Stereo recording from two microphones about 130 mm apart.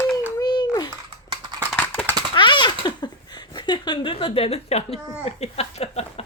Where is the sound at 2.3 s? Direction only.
35° left (ahead or behind).